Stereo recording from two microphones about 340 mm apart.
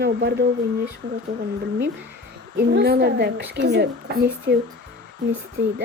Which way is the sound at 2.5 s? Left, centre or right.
Right.